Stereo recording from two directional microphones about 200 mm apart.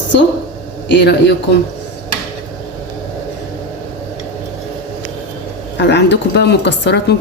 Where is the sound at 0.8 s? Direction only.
60° left (ahead or behind).